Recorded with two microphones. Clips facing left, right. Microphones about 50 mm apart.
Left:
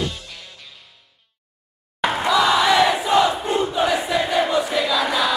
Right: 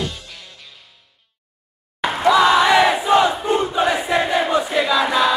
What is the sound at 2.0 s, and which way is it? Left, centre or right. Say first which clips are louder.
Music: left 1 dB; centre.